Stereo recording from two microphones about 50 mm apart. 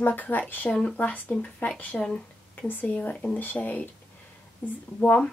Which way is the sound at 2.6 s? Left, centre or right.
Left.